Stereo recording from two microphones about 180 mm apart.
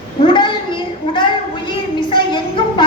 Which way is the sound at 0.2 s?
30° left (ahead or behind).